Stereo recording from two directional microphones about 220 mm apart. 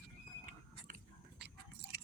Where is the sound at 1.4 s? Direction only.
50° right (ahead or behind).